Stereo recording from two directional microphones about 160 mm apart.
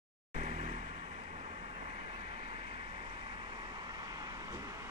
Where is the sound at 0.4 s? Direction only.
45° right (ahead or behind).